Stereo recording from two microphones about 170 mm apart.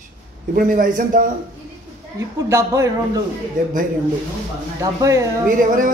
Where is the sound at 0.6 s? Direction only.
55° right (ahead or behind).